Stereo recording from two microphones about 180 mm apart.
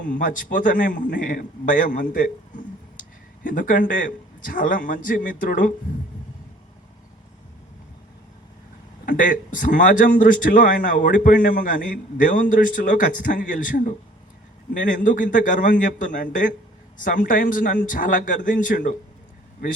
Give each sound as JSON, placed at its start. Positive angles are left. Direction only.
{"t": 0.0, "sound": "a man's voice", "side_deg": 45}
{"t": 9.0, "sound": "a man's voice", "side_deg": 45}